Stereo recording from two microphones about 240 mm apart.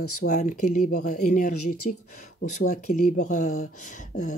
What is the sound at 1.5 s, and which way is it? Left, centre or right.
Speech, left.